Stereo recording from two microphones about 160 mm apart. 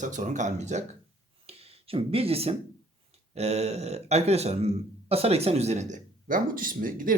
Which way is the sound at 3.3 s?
40° right (ahead or behind).